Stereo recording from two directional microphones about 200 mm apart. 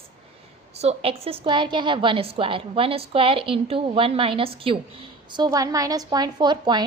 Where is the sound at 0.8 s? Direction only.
30° right (ahead or behind).